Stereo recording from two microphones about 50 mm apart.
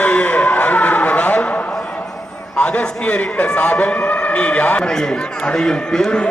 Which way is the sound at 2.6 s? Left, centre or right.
Left.